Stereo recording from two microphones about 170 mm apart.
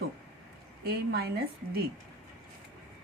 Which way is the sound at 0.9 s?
70° right (ahead or behind).